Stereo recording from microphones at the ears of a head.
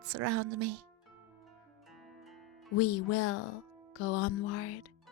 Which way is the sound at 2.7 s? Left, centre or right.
Left.